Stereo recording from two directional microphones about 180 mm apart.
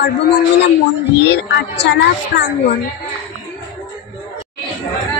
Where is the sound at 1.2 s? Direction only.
70° left (ahead or behind).